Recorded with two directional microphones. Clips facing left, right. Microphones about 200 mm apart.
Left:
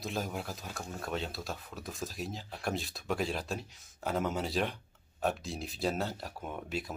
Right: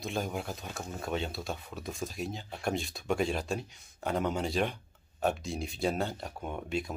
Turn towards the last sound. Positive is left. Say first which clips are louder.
# right 3 dB
turn(degrees=0)  # may be behind; listen again after turning